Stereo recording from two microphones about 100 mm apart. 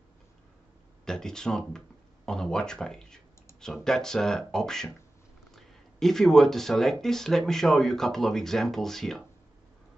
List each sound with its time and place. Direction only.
1.0 s speech: 5° left (ahead or behind)